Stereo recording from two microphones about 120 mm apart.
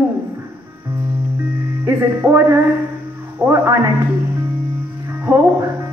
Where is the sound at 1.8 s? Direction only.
20° right (ahead or behind).